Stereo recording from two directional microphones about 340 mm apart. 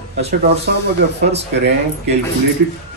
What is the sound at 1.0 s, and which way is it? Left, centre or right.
Speech, right.